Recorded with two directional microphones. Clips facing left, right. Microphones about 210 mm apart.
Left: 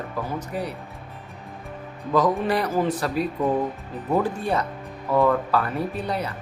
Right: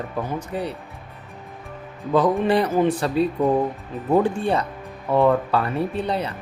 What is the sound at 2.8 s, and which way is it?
Speech, 30° right (ahead or behind).